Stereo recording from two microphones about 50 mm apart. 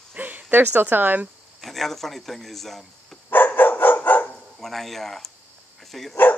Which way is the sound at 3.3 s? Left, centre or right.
Left.